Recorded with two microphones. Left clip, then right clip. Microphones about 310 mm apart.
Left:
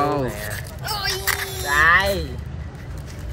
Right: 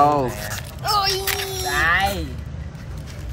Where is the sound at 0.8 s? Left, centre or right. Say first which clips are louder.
Right 4 dB; right.